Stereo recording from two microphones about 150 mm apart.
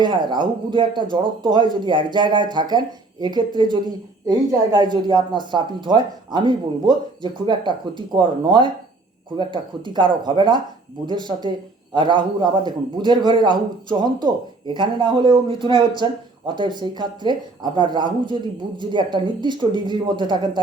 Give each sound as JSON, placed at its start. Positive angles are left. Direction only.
{"t": 0.0, "sound": "speech", "side_deg": -30}